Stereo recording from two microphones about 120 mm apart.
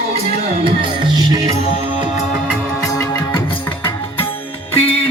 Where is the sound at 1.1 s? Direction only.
30° right (ahead or behind).